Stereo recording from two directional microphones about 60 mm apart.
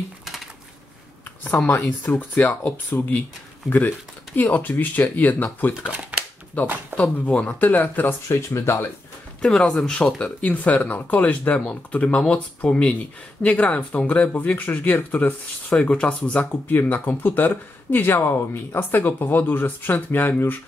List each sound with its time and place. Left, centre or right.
1.7 s speech: left
4.4 s speech: left
5.9 s speech: right
6.6 s speech: left
8.3 s speech: left
9.4 s speech: centre; by 20.5 s left